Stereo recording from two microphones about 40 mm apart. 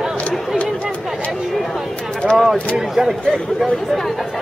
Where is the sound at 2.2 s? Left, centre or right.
Centre.